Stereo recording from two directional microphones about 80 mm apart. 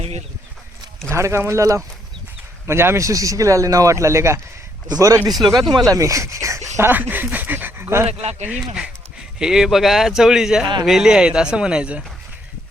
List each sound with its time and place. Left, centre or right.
1.1 s speech: right
5.3 s speech: centre
5.9 s speech: right
6.9 s speech: right
8.4 s speech: centre